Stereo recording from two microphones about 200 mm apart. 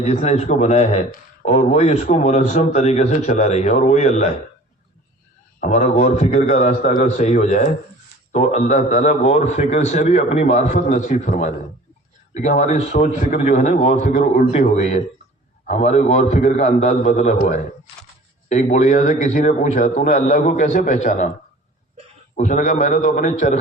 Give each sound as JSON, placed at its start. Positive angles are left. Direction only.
{"t": 0.0, "sound": "speech", "side_deg": 35}
{"t": 5.5, "sound": "speech", "side_deg": 35}
{"t": 22.4, "sound": "speech", "side_deg": 40}